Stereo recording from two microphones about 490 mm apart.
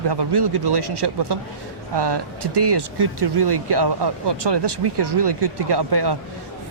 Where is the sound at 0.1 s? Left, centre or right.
Right.